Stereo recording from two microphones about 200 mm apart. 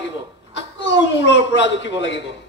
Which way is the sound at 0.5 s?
65° left (ahead or behind).